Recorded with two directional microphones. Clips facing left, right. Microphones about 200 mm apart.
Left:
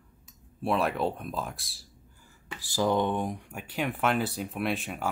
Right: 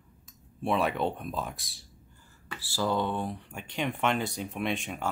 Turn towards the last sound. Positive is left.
turn(degrees=5)  # may be behind; listen again after turning